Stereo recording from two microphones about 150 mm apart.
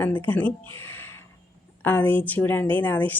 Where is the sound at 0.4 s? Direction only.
35° right (ahead or behind).